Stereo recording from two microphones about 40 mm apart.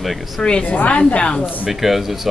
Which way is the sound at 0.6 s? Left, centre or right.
Left.